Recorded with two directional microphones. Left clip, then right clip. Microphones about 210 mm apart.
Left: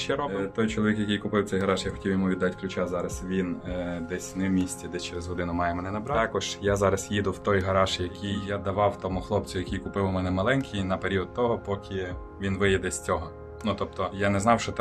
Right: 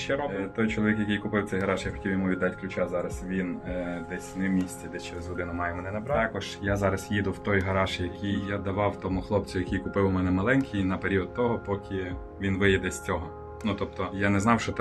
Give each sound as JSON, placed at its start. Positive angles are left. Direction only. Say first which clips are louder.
{"t": 0.1, "sound": "speech", "louder": "even", "side_deg": 15}
{"t": 4.4, "sound": "speech", "louder": "left 1 dB", "side_deg": 20}